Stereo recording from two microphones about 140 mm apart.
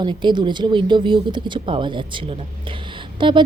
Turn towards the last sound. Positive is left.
turn(degrees=-35)  # may be behind; listen again after turning